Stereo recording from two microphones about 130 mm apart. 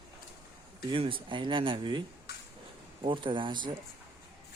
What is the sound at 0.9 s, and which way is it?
Speech, 40° right (ahead or behind).